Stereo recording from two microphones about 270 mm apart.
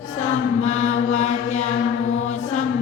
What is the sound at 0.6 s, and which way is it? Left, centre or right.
Mantra, left.